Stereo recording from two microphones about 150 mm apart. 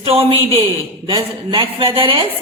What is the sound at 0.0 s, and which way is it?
A woman's voice, 40° right (ahead or behind).